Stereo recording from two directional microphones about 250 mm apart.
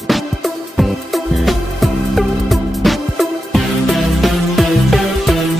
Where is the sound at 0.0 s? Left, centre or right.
Centre.